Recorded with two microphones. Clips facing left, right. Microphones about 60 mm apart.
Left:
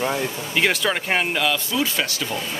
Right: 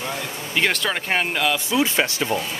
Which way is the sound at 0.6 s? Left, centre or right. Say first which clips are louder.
Left 1 dB; centre.